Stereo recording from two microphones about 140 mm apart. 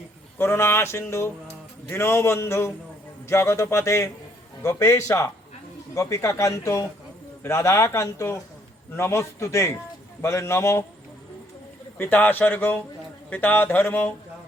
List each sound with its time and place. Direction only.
0.3 s speech: 15° left (ahead or behind)
11.9 s speech: 15° left (ahead or behind)